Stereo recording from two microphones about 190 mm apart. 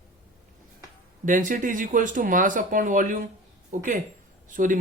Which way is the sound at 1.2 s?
45° right (ahead or behind).